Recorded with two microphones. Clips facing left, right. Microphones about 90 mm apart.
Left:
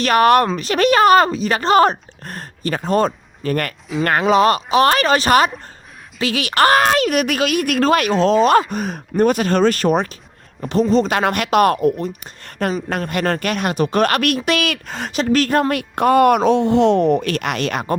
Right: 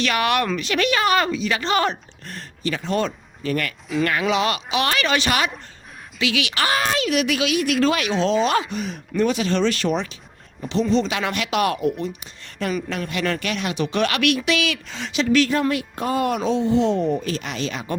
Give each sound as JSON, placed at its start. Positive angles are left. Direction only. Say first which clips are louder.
{"t": 0.0, "sound": "speech", "louder": "left 8 dB", "side_deg": 45}